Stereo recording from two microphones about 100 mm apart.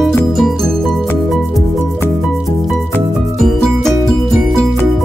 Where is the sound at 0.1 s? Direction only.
Centre (ahead or behind).